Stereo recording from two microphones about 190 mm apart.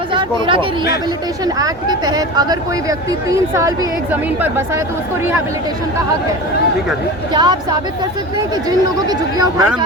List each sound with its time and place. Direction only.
0.1 s speech: 25° right (ahead or behind); by 4.8 s 10° right (ahead or behind)
7.3 s speech: 20° right (ahead or behind)
9.0 s speech: 20° right (ahead or behind)